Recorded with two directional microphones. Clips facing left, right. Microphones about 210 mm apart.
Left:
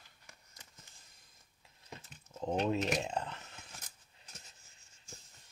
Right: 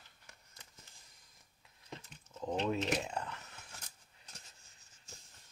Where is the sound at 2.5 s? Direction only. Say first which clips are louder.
Left 2 dB; 20° left (ahead or behind).